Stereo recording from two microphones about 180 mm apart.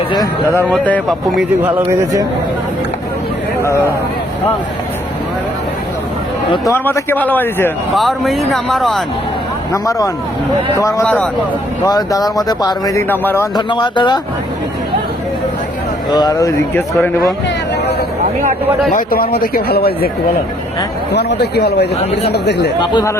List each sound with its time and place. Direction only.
0.1 s speech: 20° left (ahead or behind)
0.7 s speech: 5° left (ahead or behind)
1.6 s a man's voice: 15° right (ahead or behind)
3.6 s speech: 15° left (ahead or behind)
6.7 s speech: 10° left (ahead or behind)
9.7 s speech: 20° left (ahead or behind)
11.0 s speech: 5° left (ahead or behind)
11.9 s speech: 20° left (ahead or behind)
13.6 s speech: 25° left (ahead or behind)
16.0 s speech: 20° left (ahead or behind)
18.9 s a man's voice: 50° left (ahead or behind)
21.1 s a man's voice: 70° left (ahead or behind)
22.8 s speech: 25° left (ahead or behind)